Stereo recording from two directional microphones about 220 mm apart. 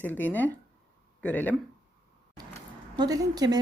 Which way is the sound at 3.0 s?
15° right (ahead or behind).